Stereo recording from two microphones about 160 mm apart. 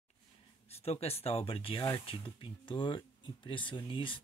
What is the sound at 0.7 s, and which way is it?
Speech, 40° left (ahead or behind).